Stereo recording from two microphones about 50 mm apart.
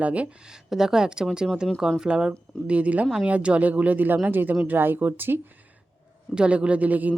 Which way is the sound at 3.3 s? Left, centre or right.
Right.